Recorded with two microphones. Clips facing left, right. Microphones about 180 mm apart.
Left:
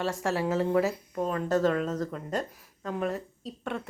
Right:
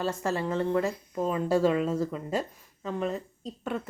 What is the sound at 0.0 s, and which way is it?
Speech, centre (ahead or behind).